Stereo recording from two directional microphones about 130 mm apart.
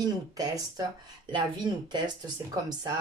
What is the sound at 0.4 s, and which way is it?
Speech, 30° right (ahead or behind).